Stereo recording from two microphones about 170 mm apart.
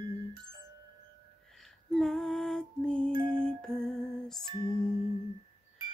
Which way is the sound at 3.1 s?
30° right (ahead or behind).